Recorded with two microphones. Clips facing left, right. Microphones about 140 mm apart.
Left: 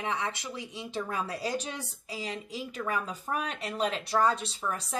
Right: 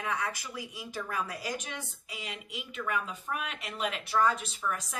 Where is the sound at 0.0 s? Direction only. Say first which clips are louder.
Left 1 dB; 25° left (ahead or behind).